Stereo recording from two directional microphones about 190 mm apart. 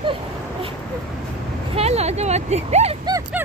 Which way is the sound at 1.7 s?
35° right (ahead or behind).